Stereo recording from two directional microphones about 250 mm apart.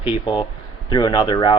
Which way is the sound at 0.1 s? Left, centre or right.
Centre.